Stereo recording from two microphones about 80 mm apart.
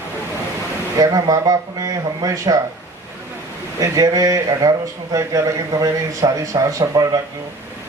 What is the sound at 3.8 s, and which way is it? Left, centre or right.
Speech, right.